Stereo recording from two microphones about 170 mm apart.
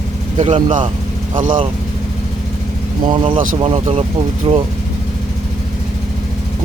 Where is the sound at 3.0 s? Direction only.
30° right (ahead or behind).